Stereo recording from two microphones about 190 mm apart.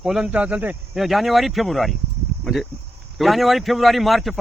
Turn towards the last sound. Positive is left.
turn(degrees=0)  # may be behind; listen again after turning